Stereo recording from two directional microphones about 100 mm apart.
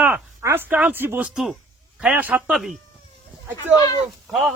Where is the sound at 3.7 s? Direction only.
40° left (ahead or behind).